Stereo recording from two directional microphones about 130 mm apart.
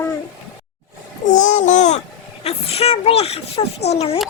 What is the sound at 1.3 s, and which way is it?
Babbling, 75° left (ahead or behind).